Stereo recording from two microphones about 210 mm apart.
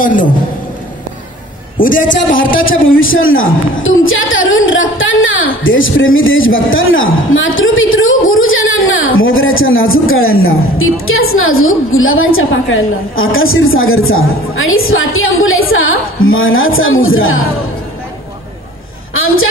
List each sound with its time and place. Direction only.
0.0 s a man's voice: 40° left (ahead or behind)
1.8 s a man's voice: 40° left (ahead or behind)
2.0 s a man's voice: 65° left (ahead or behind)
19.1 s a sound: 75° left (ahead or behind)